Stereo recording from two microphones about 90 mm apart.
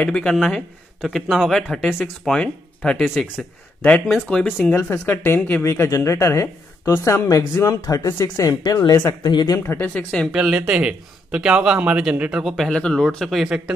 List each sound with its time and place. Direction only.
0.0 s speech: 10° left (ahead or behind)
2.2 s speech: 10° left (ahead or behind)
4.9 s speech: 25° left (ahead or behind)
7.2 s speech: 40° left (ahead or behind)
8.1 s speech: 25° left (ahead or behind)
8.5 s speech: 45° left (ahead or behind)
9.5 s speech: 30° left (ahead or behind)
9.9 s speech: 5° left (ahead or behind)
10.3 s speech: 5° right (ahead or behind)